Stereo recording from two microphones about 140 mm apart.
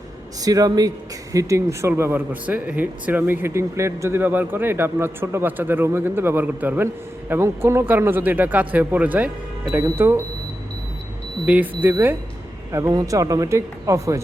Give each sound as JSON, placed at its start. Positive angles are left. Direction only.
{"t": 0.4, "sound": "speech", "side_deg": -25}
{"t": 11.4, "sound": "speech", "side_deg": -10}